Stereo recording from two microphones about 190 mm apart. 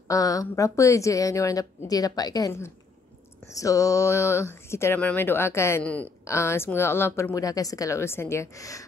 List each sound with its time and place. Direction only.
0.1 s speech: 20° left (ahead or behind)